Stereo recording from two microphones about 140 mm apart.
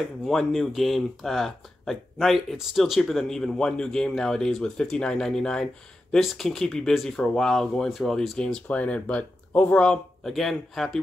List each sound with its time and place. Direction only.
0.2 s speech: centre (ahead or behind)